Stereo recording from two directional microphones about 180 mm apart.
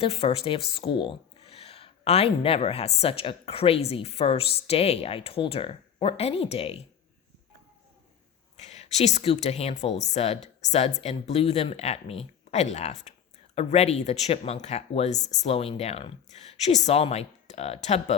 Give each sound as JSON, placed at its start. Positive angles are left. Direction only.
{"t": 0.0, "sound": "speech", "side_deg": 35}
{"t": 8.5, "sound": "speech", "side_deg": 40}